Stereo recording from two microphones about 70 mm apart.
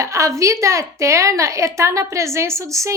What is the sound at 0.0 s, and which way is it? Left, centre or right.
A woman's voice, right.